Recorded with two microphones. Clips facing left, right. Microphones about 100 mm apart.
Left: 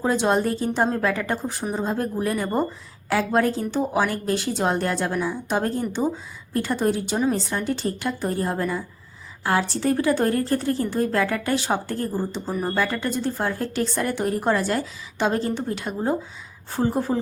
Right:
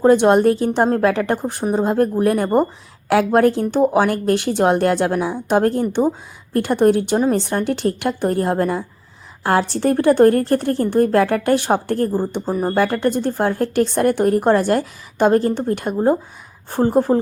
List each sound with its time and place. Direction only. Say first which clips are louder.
0.0 s speech: right 9 dB; 60° right (ahead or behind)
12.5 s speech: right 6 dB; 40° right (ahead or behind)
12.7 s speech: right 8 dB; 55° right (ahead or behind)